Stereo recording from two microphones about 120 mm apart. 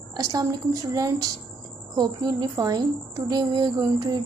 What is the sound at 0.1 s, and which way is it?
A woman's voice, 30° right (ahead or behind).